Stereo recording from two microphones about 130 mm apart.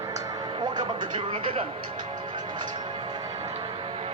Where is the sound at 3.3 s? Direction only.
50° right (ahead or behind).